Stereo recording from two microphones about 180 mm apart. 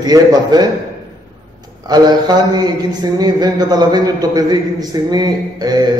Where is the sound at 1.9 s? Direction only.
25° right (ahead or behind).